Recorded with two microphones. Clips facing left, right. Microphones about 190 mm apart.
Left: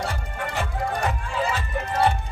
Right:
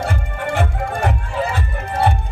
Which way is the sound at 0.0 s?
55° right (ahead or behind).